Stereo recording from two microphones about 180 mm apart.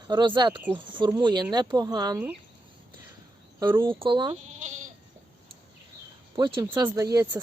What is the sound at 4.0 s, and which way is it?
Speech, 25° right (ahead or behind).